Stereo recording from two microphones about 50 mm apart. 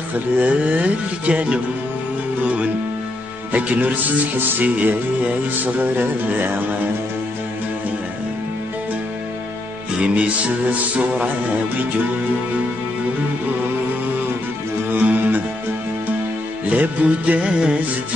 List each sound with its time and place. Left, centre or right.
0.4 s music: right
2.4 s speech: right
6.2 s speech: right
9.9 s music: right
14.9 s music: right
16.6 s music: right